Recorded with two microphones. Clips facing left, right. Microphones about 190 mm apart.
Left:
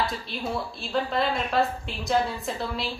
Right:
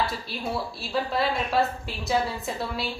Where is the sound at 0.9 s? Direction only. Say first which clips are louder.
Even; 5° right (ahead or behind).